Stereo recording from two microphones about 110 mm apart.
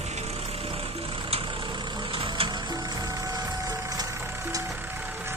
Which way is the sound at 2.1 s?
55° right (ahead or behind).